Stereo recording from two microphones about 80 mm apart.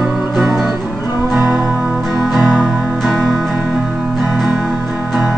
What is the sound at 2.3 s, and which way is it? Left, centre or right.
Music, centre.